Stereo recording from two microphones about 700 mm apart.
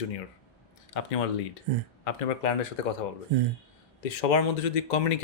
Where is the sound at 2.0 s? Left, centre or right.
Left.